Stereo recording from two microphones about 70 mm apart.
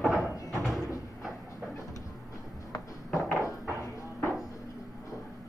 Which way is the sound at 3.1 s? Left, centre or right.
Centre.